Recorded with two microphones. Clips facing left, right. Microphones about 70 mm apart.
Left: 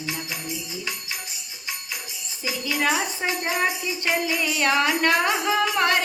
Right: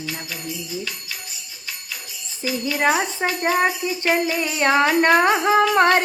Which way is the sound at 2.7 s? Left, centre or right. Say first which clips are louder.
Right 4 dB; right.